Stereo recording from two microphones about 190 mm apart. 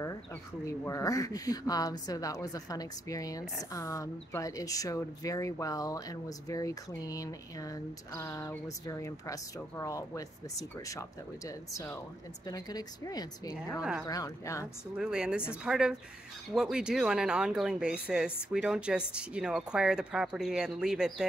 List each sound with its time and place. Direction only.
0.7 s speech: 15° left (ahead or behind)
15.0 s speech: 5° right (ahead or behind)